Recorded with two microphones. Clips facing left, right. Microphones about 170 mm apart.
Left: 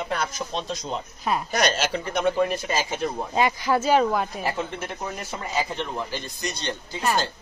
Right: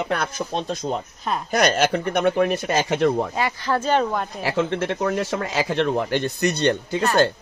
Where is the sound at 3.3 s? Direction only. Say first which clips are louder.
Left 1 dB; 15° left (ahead or behind).